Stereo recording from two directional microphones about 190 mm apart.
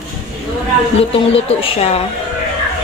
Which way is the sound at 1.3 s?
30° left (ahead or behind).